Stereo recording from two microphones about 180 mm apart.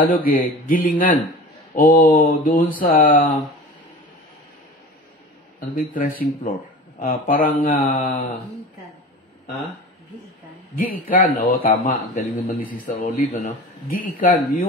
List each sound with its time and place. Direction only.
0.0 s speech: 50° left (ahead or behind)
5.8 s speech: 50° left (ahead or behind)
10.8 s speech: 55° left (ahead or behind)